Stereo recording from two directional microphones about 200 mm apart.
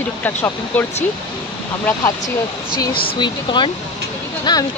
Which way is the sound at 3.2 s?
25° left (ahead or behind).